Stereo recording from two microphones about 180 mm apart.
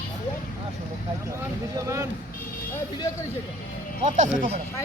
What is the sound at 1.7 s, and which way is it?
Vehicle, 15° right (ahead or behind).